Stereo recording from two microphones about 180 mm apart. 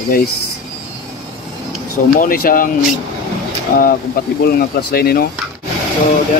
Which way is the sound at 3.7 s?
50° left (ahead or behind).